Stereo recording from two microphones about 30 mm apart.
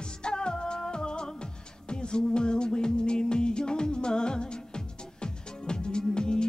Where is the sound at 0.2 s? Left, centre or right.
Left.